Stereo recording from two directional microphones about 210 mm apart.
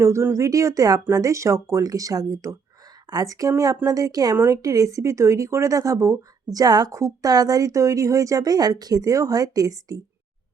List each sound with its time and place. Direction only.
0.0 s a woman's voice: 15° right (ahead or behind)